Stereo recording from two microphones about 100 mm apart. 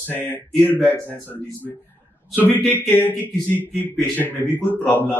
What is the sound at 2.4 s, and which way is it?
A man's voice, 20° left (ahead or behind).